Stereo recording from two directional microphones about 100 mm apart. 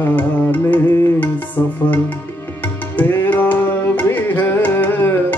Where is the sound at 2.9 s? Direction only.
20° left (ahead or behind).